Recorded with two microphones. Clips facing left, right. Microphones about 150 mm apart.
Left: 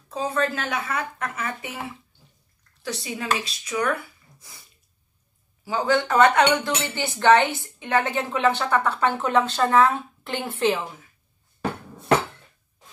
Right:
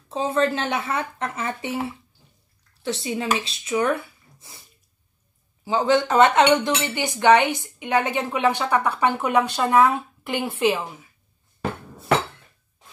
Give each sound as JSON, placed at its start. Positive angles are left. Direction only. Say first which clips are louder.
{"t": 0.1, "sound": "speech", "louder": "right 3 dB", "side_deg": -25}
{"t": 5.7, "sound": "speech", "louder": "right 3 dB", "side_deg": -20}